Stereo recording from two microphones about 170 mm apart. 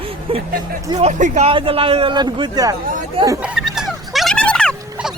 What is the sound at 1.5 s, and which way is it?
A man's voice, 30° right (ahead or behind).